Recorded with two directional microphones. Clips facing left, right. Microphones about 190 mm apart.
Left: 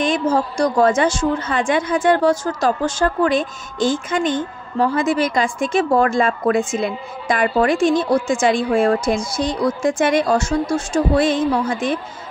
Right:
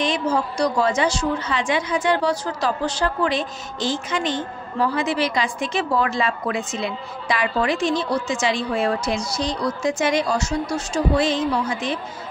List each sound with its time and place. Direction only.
0.0 s a woman's voice: 50° left (ahead or behind)